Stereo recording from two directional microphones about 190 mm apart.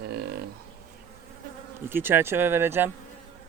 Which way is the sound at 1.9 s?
10° right (ahead or behind).